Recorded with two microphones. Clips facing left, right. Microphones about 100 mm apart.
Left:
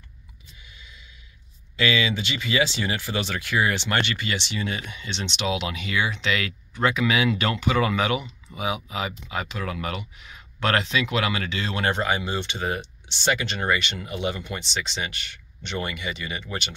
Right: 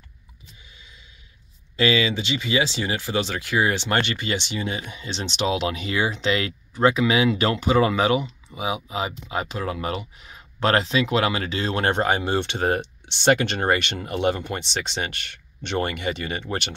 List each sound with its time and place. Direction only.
0.7 s a sound: 30° right (ahead or behind)
1.8 s speech: 30° right (ahead or behind)
4.4 s speech: 20° right (ahead or behind); by 16.7 s 55° right (ahead or behind)